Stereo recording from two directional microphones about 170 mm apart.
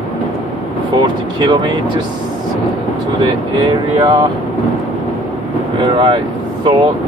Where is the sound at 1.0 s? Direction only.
25° right (ahead or behind).